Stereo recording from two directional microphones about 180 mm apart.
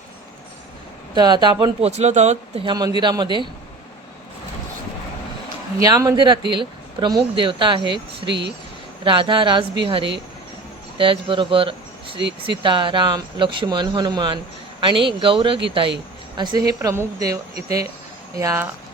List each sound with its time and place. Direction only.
1.1 s speech: 25° right (ahead or behind)
2.0 s speech: 40° right (ahead or behind)
2.6 s speech: 25° right (ahead or behind)
5.8 s speech: 20° right (ahead or behind)
8.3 s speech: 75° right (ahead or behind)
9.0 s speech: 25° right (ahead or behind)